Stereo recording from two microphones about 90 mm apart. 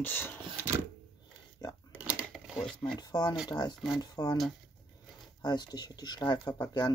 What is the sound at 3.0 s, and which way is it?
Speech, 50° left (ahead or behind).